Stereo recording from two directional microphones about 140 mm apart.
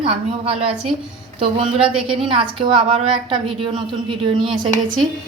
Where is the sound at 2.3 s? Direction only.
35° right (ahead or behind).